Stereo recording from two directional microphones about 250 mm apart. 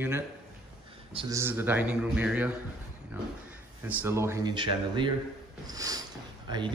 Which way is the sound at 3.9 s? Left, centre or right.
Centre.